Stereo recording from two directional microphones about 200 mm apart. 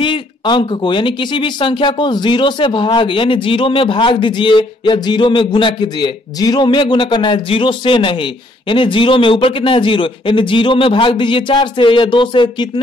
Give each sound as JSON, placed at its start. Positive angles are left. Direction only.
{"t": 0.0, "sound": "speech", "side_deg": 25}